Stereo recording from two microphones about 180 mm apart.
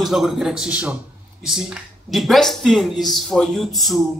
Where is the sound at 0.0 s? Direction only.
Centre (ahead or behind).